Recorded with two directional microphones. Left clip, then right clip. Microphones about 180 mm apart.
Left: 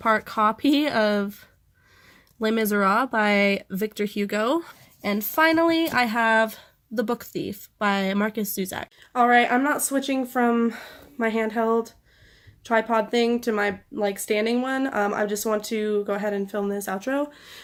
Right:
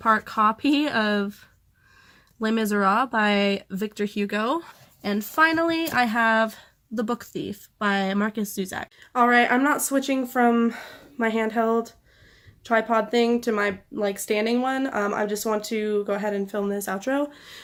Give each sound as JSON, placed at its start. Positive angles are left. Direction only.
{"t": 0.0, "sound": "speech", "side_deg": 25}
{"t": 2.4, "sound": "speech", "side_deg": 30}
{"t": 9.0, "sound": "speech", "side_deg": -5}